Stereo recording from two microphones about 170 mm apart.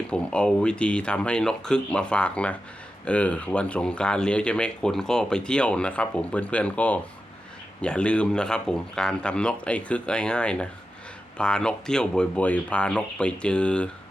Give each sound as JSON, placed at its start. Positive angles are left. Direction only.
{"t": 0.1, "sound": "speech", "side_deg": 5}